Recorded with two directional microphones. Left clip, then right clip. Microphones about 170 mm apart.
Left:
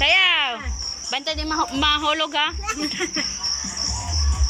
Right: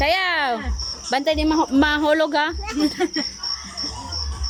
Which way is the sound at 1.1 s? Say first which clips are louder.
Right 6 dB; 45° right (ahead or behind).